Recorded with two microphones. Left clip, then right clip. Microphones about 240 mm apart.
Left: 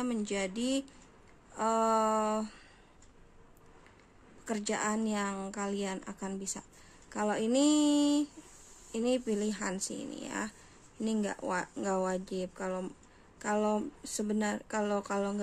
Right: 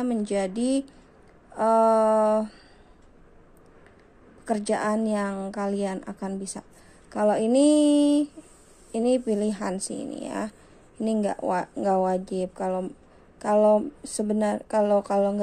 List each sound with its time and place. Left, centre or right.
0.0 s a woman's voice: centre
4.5 s a woman's voice: centre